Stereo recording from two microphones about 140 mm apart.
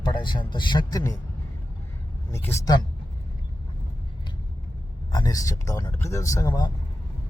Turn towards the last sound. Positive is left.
turn(degrees=25)  # may be behind; listen again after turning